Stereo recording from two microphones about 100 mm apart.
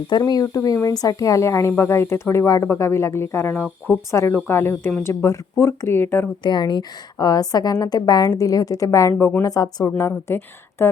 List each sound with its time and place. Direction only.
0.2 s a woman's voice: 40° left (ahead or behind); by 6.2 s 20° left (ahead or behind)
6.4 s a woman's voice: 50° left (ahead or behind); by 9.4 s 25° left (ahead or behind)
9.4 s a woman's voice: 40° left (ahead or behind)
10.0 s a woman's voice: 25° left (ahead or behind)